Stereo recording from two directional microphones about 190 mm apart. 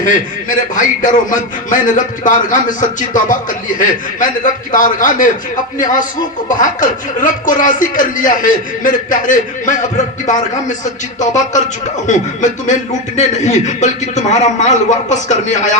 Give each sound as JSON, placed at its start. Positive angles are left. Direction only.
{"t": 0.0, "sound": "a man's voice", "side_deg": 45}
{"t": 11.2, "sound": "a man's voice", "side_deg": 40}